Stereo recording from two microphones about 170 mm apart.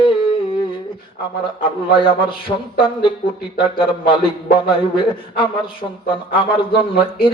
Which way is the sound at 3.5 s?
30° left (ahead or behind).